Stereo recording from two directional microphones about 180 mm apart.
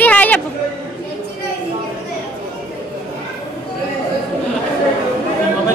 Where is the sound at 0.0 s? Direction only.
10° left (ahead or behind).